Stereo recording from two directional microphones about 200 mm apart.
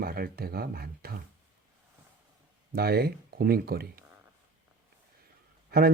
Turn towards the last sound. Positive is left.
turn(degrees=-50)  # may be behind; listen again after turning